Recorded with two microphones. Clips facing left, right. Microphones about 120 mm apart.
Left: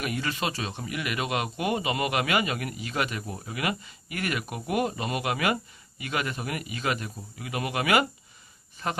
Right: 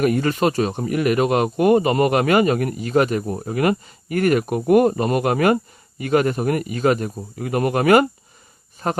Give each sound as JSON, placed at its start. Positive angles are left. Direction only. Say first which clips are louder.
{"t": 0.0, "sound": "speech", "louder": "right 12 dB", "side_deg": -45}